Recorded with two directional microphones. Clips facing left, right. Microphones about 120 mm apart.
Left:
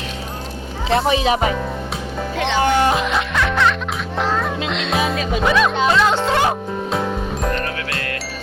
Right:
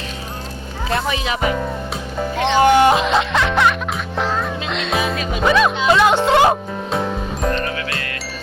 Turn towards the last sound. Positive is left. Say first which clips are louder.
# even
turn(degrees=0)  # may be behind; listen again after turning